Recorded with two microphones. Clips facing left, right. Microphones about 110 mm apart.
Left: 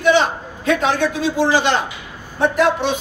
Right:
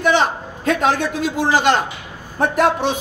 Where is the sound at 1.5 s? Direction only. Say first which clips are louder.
Right 1 dB; 45° right (ahead or behind).